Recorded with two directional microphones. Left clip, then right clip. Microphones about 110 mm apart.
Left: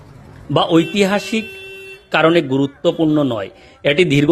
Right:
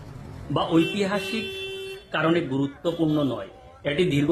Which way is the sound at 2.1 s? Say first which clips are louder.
Left 10 dB; 75° left (ahead or behind).